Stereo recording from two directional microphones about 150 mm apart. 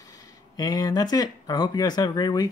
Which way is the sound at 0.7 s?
25° left (ahead or behind).